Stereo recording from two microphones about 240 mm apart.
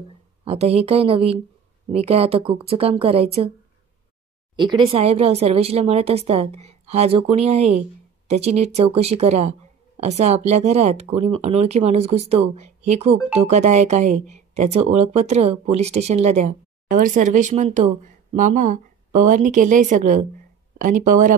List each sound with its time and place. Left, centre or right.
0.5 s speech: right
4.6 s speech: centre; by 21.4 s right